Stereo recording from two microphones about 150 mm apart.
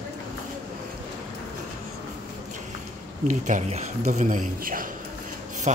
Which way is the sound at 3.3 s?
50° right (ahead or behind).